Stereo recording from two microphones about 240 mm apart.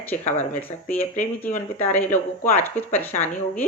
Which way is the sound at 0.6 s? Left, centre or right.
Centre.